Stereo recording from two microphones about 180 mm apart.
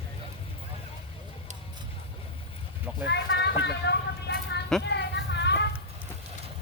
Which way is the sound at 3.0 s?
70° left (ahead or behind).